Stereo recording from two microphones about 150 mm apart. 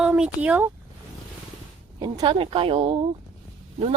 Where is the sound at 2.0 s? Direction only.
30° right (ahead or behind).